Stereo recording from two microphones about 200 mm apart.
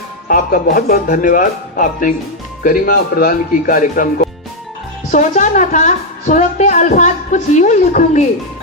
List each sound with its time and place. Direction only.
0.3 s a woman's voice: 45° left (ahead or behind)